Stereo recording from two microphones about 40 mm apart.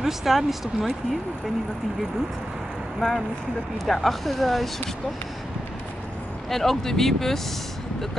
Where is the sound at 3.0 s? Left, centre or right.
Centre.